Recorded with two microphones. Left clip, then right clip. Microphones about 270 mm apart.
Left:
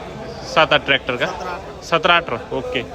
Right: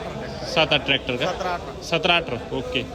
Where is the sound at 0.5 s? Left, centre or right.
Centre.